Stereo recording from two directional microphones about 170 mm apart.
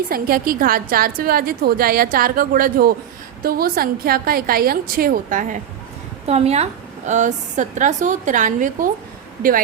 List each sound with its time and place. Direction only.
0.1 s a woman's voice: 60° right (ahead or behind)
6.2 s a woman's voice: 40° right (ahead or behind)